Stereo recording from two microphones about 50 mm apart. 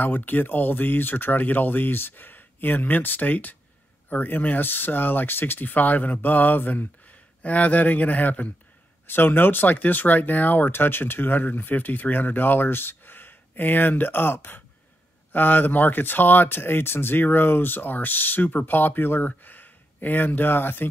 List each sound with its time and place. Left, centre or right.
0.0 s speech: left
9.0 s speech: left